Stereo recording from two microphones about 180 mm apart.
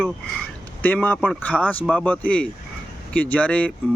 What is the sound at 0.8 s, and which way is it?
Speech, 10° left (ahead or behind).